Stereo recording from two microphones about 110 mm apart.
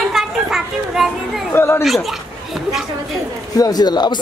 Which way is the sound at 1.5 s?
20° left (ahead or behind).